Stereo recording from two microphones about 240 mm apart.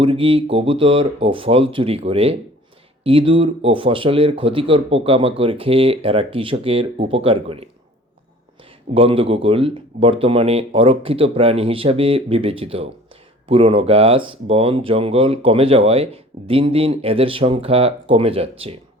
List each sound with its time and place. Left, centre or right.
0.0 s speech: right
9.0 s speech: right